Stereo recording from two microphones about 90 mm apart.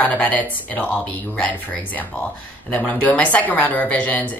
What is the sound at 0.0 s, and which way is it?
Speech, 20° left (ahead or behind).